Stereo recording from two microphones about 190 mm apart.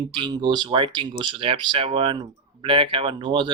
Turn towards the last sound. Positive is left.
turn(degrees=-25)  # may be behind; listen again after turning